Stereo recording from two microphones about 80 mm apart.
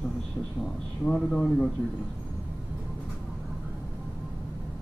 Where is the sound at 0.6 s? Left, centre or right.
Centre.